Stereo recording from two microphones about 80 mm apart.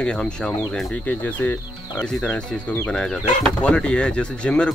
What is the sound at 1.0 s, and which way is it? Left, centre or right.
Speech, left.